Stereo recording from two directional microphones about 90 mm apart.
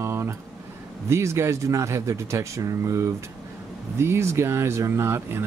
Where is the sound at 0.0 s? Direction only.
30° right (ahead or behind).